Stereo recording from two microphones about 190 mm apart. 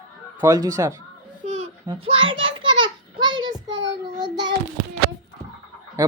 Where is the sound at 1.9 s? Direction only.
30° right (ahead or behind).